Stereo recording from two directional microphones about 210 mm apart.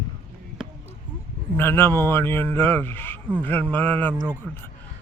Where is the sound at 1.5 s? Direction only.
10° left (ahead or behind).